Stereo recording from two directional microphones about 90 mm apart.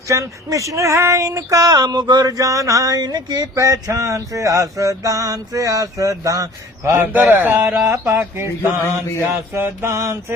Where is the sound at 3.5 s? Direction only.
35° right (ahead or behind).